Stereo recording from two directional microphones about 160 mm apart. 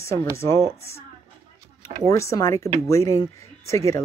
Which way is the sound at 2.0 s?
20° left (ahead or behind).